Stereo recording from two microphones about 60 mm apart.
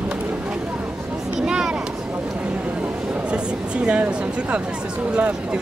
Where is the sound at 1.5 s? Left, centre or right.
Centre.